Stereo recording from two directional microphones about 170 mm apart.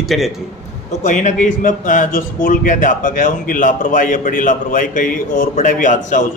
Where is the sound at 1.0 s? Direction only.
45° left (ahead or behind).